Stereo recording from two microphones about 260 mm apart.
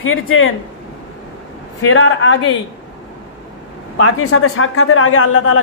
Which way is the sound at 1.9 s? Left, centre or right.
Left.